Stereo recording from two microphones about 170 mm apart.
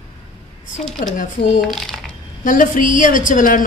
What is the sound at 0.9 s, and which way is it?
Speech, 50° left (ahead or behind).